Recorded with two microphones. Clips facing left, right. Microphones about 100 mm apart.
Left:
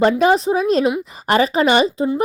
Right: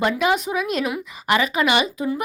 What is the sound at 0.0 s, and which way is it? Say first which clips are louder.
A woman's voice: left 6 dB; 35° left (ahead or behind).